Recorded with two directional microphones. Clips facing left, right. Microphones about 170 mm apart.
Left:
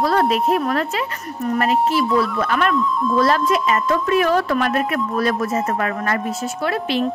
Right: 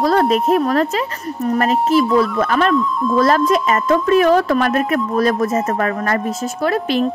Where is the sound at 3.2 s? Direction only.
45° right (ahead or behind).